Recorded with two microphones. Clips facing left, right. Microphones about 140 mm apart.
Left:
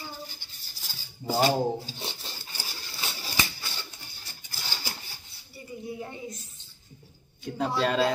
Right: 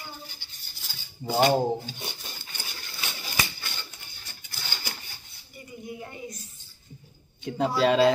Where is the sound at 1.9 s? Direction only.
25° left (ahead or behind).